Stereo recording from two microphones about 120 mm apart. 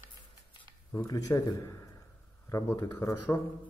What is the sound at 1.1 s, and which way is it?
A man's voice, 30° left (ahead or behind).